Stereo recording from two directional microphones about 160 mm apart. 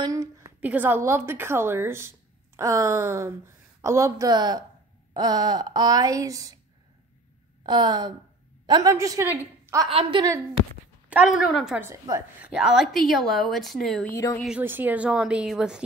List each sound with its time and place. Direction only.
0.0 s a sound: 20° right (ahead or behind)
0.6 s a woman's voice: 10° right (ahead or behind)
7.6 s a woman's voice: 25° right (ahead or behind)
9.8 s a woman's voice: 35° right (ahead or behind)
11.1 s a woman's voice: 5° right (ahead or behind)
11.8 s a woman's voice: 15° right (ahead or behind)
12.4 s a woman's voice: 5° right (ahead or behind)
14.1 s speech: 15° left (ahead or behind)
14.6 s a woman's voice: 10° right (ahead or behind)